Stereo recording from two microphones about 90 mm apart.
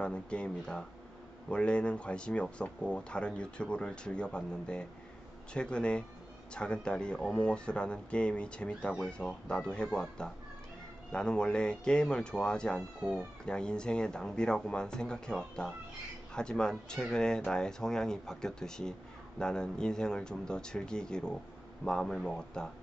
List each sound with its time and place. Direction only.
0.0 s speech: 10° left (ahead or behind)